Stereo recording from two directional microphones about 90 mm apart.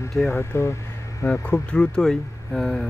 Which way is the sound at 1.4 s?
15° left (ahead or behind).